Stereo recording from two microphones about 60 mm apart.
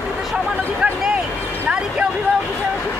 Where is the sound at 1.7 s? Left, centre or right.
Centre.